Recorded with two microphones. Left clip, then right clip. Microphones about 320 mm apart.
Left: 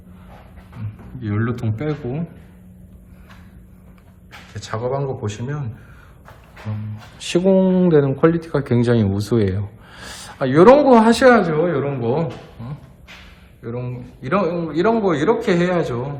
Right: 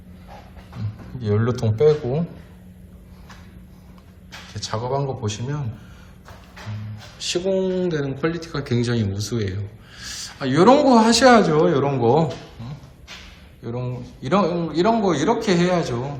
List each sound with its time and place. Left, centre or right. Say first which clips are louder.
1.2 s speech: right 3 dB; centre
4.3 s speech: even; centre
7.2 s a sound: left 5 dB; centre
7.8 s a man's voice: left 8 dB; centre